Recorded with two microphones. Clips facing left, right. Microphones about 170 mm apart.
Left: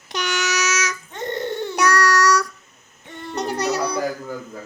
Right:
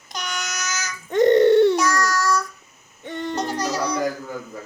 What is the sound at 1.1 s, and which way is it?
Crying, 80° right.